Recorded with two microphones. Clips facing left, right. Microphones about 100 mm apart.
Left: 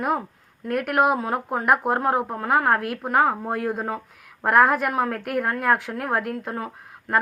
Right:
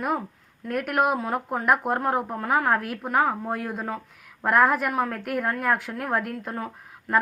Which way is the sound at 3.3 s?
15° left (ahead or behind).